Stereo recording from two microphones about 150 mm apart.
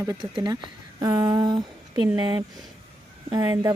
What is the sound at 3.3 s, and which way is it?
Speech, 25° right (ahead or behind).